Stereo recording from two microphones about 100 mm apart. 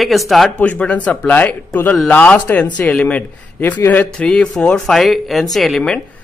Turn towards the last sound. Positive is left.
turn(degrees=5)  # may be behind; listen again after turning